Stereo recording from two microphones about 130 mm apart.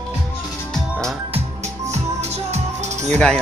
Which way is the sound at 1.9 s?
55° right (ahead or behind).